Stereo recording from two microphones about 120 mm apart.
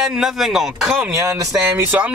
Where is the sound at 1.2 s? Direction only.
20° right (ahead or behind).